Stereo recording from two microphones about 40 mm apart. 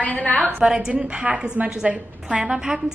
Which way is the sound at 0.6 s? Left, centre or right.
Centre.